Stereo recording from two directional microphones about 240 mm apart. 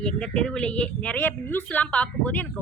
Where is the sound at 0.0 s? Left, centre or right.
Centre.